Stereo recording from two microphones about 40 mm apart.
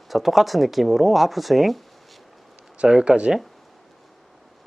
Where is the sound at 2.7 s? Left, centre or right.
Right.